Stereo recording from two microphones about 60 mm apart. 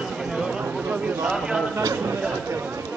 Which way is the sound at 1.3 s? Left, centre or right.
Centre.